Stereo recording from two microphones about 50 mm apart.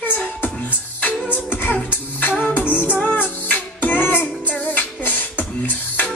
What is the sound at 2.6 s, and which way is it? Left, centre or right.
Music, right.